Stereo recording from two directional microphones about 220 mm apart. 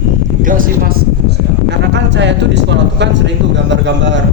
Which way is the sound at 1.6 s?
55° right (ahead or behind).